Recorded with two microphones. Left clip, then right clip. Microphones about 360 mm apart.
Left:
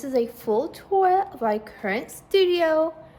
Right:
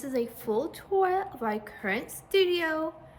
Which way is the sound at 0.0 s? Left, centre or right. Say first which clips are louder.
Left 7 dB; centre.